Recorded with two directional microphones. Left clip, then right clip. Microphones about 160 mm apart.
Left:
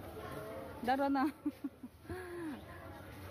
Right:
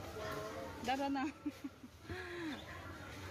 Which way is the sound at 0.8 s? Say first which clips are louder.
Left 5 dB; 35° left (ahead or behind).